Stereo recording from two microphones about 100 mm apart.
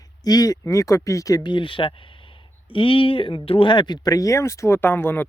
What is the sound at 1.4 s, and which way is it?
Speech, 55° left (ahead or behind).